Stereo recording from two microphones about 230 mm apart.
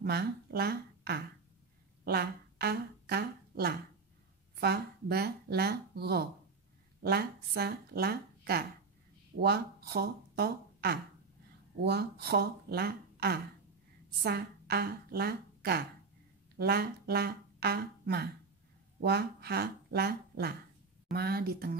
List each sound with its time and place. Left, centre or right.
0.0 s a woman's voice: right